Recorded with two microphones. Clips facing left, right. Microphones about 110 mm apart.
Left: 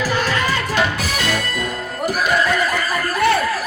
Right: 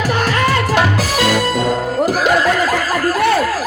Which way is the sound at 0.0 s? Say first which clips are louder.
Right 4 dB; 65° right (ahead or behind).